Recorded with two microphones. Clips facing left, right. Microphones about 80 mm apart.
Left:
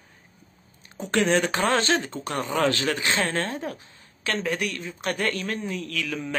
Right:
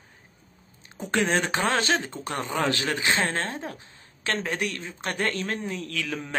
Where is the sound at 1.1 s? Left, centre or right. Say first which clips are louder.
Left 2 dB; right.